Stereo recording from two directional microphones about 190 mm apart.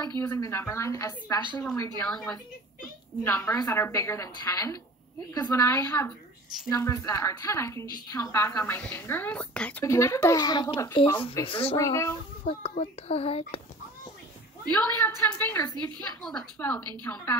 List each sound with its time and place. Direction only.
0.2 s a woman's voice: 15° left (ahead or behind)
3.3 s a woman's voice: 15° left (ahead or behind); by 11.7 s 30° left (ahead or behind)
11.7 s a woman's voice: 15° left (ahead or behind)
12.4 s a child's voice: 30° left (ahead or behind)
14.7 s a woman's voice: 10° left (ahead or behind)
16.2 s a woman's voice: 5° left (ahead or behind)